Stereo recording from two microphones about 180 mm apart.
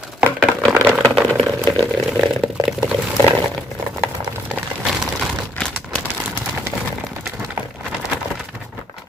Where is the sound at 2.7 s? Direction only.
5° right (ahead or behind).